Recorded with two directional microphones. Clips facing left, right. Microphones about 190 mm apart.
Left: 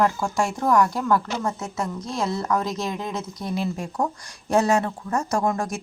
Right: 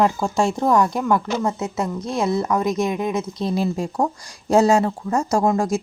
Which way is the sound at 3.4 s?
35° right (ahead or behind).